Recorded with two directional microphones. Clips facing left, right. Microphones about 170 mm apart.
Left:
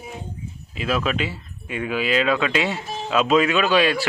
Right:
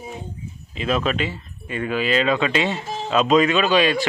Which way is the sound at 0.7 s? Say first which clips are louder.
Right 1 dB; 5° left (ahead or behind).